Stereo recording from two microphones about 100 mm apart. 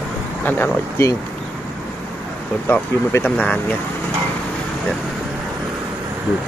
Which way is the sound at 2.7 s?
20° left (ahead or behind).